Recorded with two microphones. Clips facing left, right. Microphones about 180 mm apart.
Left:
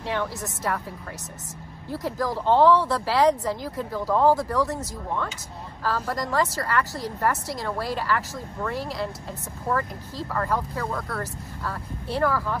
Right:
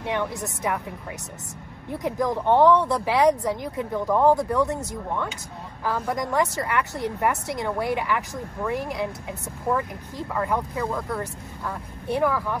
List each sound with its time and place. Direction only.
0.1 s speech: 15° right (ahead or behind)
1.9 s speech: 20° right (ahead or behind)
5.9 s speech: 15° right (ahead or behind)
10.7 s speech: centre (ahead or behind)
11.0 s speech: 15° right (ahead or behind)